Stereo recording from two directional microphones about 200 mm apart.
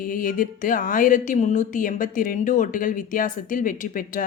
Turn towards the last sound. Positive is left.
turn(degrees=45)  # may be behind; listen again after turning